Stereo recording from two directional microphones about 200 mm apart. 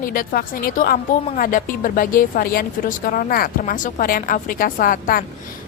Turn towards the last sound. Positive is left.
turn(degrees=45)  # may be behind; listen again after turning